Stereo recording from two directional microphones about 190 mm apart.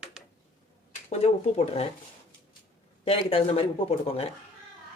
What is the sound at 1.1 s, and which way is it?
Speech, 35° left (ahead or behind).